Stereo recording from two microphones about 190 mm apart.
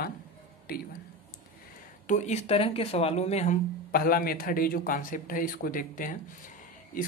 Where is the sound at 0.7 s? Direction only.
50° left (ahead or behind).